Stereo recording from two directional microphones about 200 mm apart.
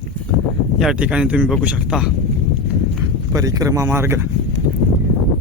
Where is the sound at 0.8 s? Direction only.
5° right (ahead or behind).